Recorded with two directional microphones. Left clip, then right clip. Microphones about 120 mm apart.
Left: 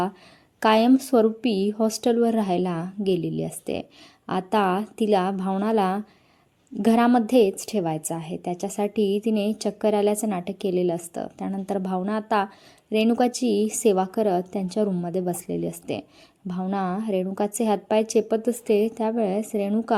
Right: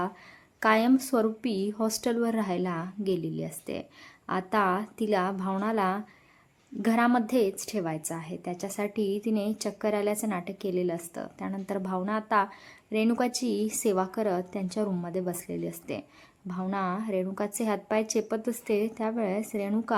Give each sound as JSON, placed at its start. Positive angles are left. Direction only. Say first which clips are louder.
{"t": 0.6, "sound": "a woman's voice", "louder": "left 5 dB", "side_deg": 35}